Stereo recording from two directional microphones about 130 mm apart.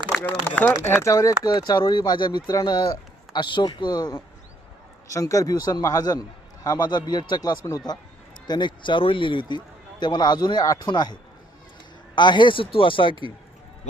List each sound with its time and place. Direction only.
0.1 s speech: 10° left (ahead or behind)
1.0 s a man's voice: 25° left (ahead or behind); by 13.2 s 40° left (ahead or behind)